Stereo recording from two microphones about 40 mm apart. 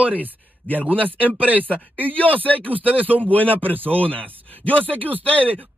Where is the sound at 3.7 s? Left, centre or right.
Right.